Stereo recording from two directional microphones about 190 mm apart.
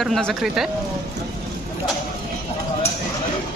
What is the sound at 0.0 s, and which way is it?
Speech, 5° left (ahead or behind).